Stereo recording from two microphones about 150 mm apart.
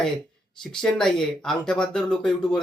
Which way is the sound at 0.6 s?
5° left (ahead or behind).